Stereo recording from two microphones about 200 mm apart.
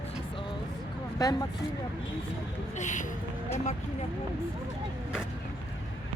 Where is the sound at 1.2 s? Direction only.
20° left (ahead or behind).